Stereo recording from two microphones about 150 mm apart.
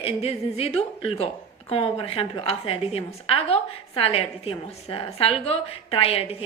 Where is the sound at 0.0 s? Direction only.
40° left (ahead or behind).